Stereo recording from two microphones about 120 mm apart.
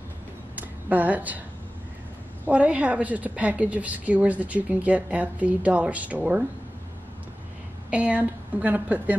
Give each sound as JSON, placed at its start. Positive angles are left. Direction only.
{"t": 0.6, "sound": "a sound", "side_deg": -15}
{"t": 2.4, "sound": "a woman's voice", "side_deg": -10}
{"t": 7.9, "sound": "a woman's voice", "side_deg": -10}